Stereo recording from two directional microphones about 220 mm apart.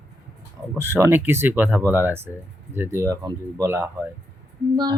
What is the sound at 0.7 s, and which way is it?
A woman's voice, 10° right (ahead or behind).